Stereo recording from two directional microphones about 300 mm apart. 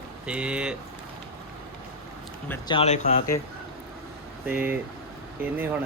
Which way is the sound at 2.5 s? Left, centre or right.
Centre.